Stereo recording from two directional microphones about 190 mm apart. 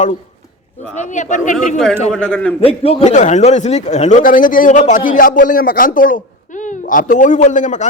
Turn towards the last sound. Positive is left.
turn(degrees=40)  # may be behind; listen again after turning